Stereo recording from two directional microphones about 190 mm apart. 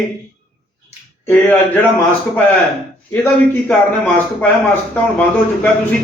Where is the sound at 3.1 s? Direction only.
10° left (ahead or behind).